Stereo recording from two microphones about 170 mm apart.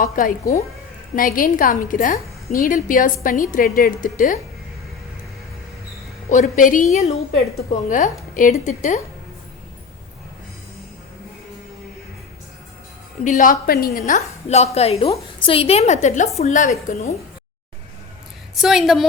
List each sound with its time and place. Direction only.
0.0 s a woman's voice: 55° left (ahead or behind)
6.3 s a woman's voice: 50° left (ahead or behind)
6.9 s a woman's voice: 40° left (ahead or behind)
7.9 s a woman's voice: 50° left (ahead or behind)
13.2 s a woman's voice: 50° left (ahead or behind)
14.0 s a woman's voice: 40° left (ahead or behind)
18.5 s a woman's voice: centre (ahead or behind)